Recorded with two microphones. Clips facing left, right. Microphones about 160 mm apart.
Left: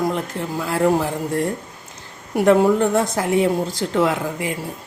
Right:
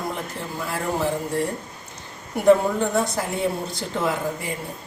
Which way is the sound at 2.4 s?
90° left.